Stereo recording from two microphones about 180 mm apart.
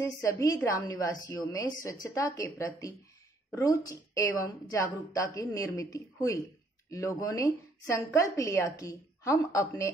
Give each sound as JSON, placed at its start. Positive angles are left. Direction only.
{"t": 0.0, "sound": "a woman's voice", "side_deg": 15}